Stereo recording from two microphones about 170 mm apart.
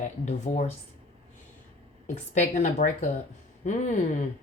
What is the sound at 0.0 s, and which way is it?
Speech, 40° left (ahead or behind).